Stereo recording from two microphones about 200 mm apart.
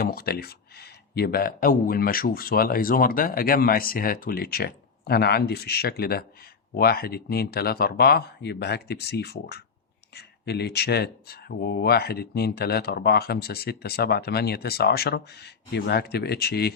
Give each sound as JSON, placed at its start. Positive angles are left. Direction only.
{"t": 0.0, "sound": "speech", "side_deg": 50}